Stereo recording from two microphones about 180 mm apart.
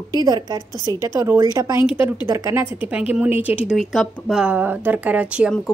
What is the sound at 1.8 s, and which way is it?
A woman's voice, 10° right (ahead or behind).